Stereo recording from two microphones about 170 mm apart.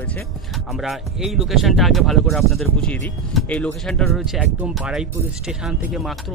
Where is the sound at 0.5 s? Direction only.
Centre (ahead or behind).